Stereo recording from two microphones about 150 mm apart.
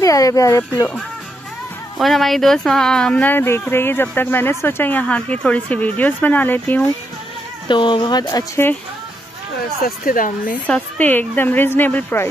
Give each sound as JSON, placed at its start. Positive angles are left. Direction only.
{"t": 0.0, "sound": "speech", "side_deg": 25}
{"t": 2.0, "sound": "speech", "side_deg": 0}
{"t": 7.6, "sound": "speech", "side_deg": 30}
{"t": 9.8, "sound": "speech", "side_deg": 70}
{"t": 10.7, "sound": "speech", "side_deg": 10}